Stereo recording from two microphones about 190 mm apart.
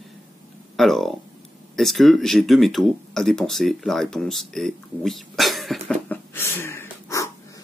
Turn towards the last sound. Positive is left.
turn(degrees=15)  # may be behind; listen again after turning